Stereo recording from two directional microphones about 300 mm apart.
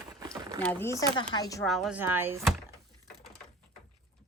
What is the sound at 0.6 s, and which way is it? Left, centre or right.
Speech, centre.